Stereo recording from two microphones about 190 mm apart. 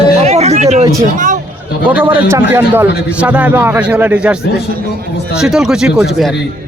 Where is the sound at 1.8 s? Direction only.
10° right (ahead or behind).